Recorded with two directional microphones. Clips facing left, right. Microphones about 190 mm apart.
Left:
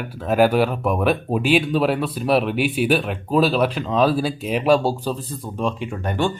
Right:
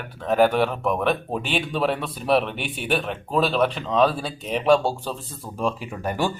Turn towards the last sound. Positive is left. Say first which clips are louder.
# left 3 dB
turn(degrees=-5)  # may be behind; listen again after turning